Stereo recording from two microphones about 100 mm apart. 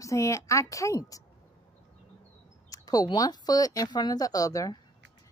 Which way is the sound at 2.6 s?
35° left (ahead or behind).